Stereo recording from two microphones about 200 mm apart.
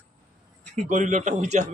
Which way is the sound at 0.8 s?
40° right (ahead or behind).